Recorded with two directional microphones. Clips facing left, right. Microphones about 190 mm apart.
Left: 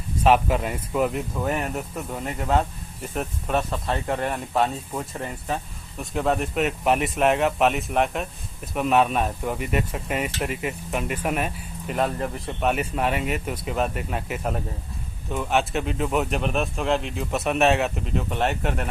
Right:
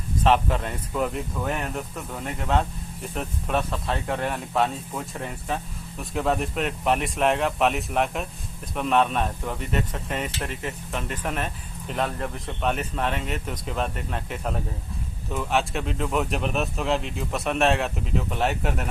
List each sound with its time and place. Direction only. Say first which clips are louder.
0.2 s speech: left 2 dB; 10° left (ahead or behind)